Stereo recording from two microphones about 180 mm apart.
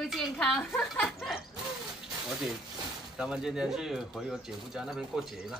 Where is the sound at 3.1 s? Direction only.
5° right (ahead or behind).